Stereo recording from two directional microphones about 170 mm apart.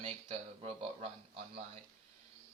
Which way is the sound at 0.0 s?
35° right (ahead or behind).